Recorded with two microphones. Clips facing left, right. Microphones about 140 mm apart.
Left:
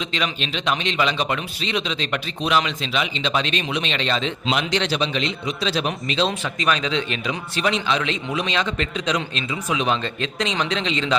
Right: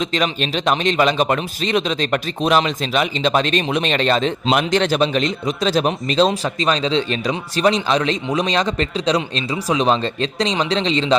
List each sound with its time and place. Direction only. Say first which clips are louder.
0.0 s a man's voice: right 6 dB; 45° right (ahead or behind)